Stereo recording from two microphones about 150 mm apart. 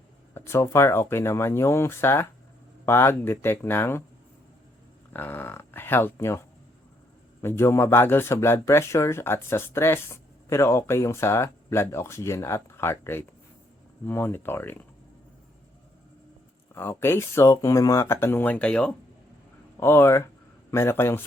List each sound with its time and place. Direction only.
0.3 s speech: 15° left (ahead or behind)
5.1 s speech: 15° left (ahead or behind)
7.4 s speech: 15° left (ahead or behind)
16.7 s speech: 15° left (ahead or behind)